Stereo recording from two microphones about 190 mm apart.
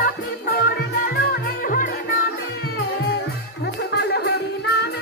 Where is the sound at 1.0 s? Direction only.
50° left (ahead or behind).